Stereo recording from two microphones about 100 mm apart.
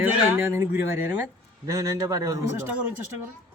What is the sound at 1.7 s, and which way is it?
Speech, 35° right (ahead or behind).